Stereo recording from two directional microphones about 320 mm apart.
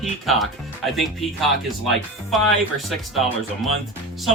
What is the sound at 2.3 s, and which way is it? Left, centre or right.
Speech, centre.